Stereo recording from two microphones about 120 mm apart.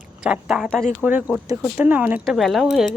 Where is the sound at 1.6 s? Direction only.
10° right (ahead or behind).